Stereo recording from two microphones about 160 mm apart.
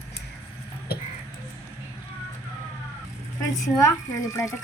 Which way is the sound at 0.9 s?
80° left.